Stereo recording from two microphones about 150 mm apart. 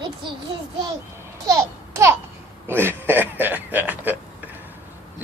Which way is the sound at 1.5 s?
15° right (ahead or behind).